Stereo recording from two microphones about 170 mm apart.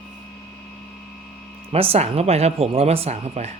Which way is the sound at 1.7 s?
35° right (ahead or behind).